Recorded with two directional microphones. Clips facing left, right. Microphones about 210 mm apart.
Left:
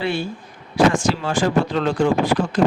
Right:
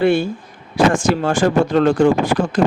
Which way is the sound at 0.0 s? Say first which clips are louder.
Right 8 dB; 50° right (ahead or behind).